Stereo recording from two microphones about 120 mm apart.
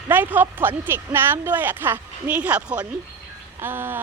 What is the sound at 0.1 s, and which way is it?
Speech, 15° right (ahead or behind).